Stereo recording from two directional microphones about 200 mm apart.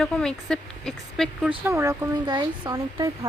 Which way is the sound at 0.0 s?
5° left (ahead or behind).